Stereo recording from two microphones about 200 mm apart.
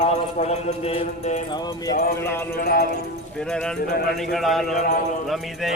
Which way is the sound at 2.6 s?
50° left (ahead or behind).